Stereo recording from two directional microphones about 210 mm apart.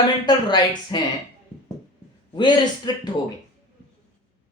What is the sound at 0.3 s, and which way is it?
Speech, 20° left (ahead or behind).